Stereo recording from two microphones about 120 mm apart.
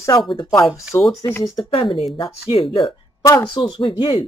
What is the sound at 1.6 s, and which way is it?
Speech, 50° left (ahead or behind).